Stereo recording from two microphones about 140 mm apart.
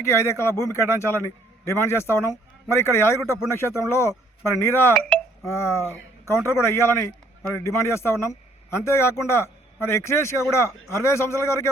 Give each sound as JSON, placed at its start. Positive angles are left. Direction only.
{"t": 0.0, "sound": "a man's voice", "side_deg": 20}
{"t": 4.9, "sound": "hiccup", "side_deg": 0}
{"t": 5.5, "sound": "a man's voice", "side_deg": 20}